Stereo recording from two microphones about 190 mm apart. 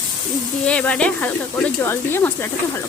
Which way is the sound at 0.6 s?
5° left (ahead or behind).